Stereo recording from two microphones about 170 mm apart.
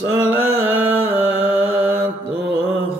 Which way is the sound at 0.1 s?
10° right (ahead or behind).